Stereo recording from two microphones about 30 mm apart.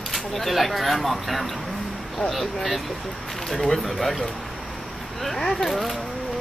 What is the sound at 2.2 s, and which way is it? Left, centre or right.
Speech, left.